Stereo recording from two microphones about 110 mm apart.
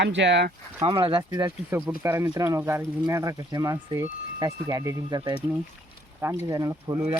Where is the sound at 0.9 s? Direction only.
55° right (ahead or behind).